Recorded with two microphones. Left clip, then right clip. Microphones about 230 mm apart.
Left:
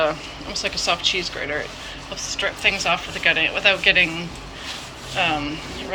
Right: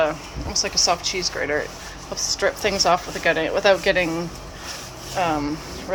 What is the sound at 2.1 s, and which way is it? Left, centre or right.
Speech, right.